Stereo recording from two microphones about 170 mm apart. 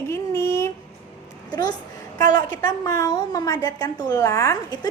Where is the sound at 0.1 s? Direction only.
15° left (ahead or behind).